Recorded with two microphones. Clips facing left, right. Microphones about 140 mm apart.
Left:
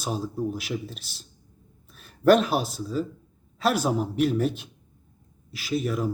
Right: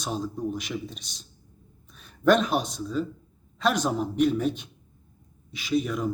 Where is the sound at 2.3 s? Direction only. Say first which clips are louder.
Left 2 dB; 5° left (ahead or behind).